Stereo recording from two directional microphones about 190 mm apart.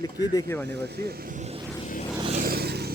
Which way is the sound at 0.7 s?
60° right (ahead or behind).